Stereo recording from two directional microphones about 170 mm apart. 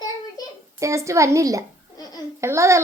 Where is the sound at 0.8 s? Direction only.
20° right (ahead or behind).